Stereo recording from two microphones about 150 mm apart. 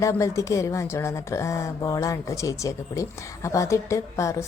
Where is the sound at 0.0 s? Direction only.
20° left (ahead or behind).